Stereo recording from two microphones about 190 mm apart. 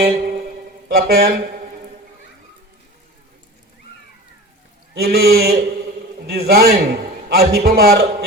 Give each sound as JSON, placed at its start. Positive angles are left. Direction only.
{"t": 0.0, "sound": "speech", "side_deg": -55}
{"t": 4.9, "sound": "a man's voice", "side_deg": -55}